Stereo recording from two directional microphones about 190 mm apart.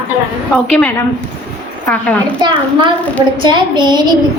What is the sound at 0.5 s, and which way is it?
Speech, 5° left (ahead or behind).